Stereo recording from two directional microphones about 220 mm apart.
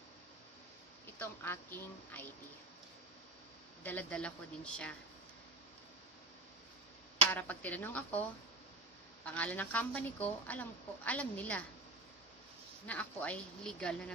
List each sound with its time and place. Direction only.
1.2 s a woman's voice: 10° left (ahead or behind)
3.8 s speech: 5° left (ahead or behind)
7.3 s a woman's voice: 5° left (ahead or behind)
9.2 s a woman's voice: 5° left (ahead or behind)
12.9 s speech: 5° left (ahead or behind)